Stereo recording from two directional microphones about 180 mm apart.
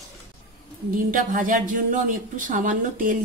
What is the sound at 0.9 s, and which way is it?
Speech, 45° right (ahead or behind).